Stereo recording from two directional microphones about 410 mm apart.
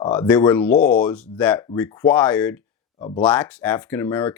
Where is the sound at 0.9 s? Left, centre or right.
Centre.